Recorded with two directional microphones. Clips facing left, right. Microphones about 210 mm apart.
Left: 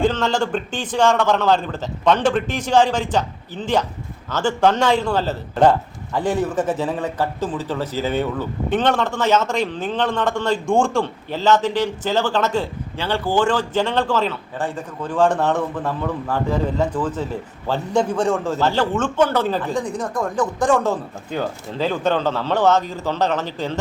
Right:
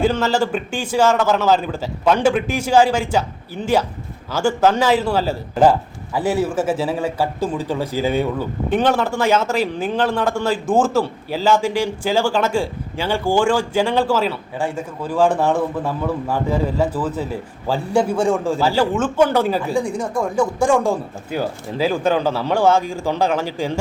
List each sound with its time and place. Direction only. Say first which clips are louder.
0.0 s speech: right 2 dB; 5° right (ahead or behind)